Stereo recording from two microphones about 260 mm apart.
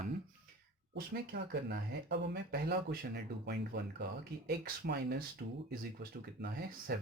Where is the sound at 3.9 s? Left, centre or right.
Right.